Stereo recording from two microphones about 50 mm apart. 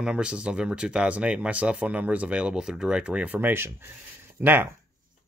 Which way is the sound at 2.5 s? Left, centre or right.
Centre.